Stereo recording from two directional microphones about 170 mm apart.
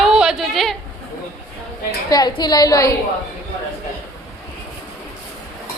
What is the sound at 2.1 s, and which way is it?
Speech, 25° left (ahead or behind).